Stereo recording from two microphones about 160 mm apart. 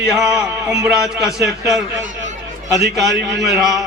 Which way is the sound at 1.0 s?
5° right (ahead or behind).